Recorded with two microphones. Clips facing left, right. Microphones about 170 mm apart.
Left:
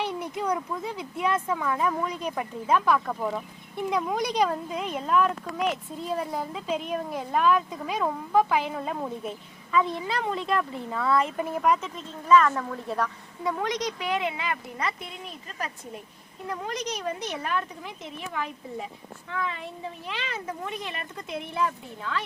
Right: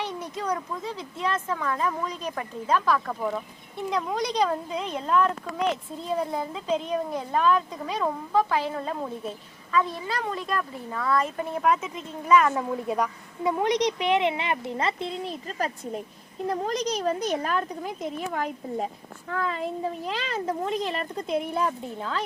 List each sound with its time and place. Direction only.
0.4 s speech: 5° left (ahead or behind)
9.7 s speech: 20° left (ahead or behind)
11.5 s speech: centre (ahead or behind); by 22.2 s 35° right (ahead or behind)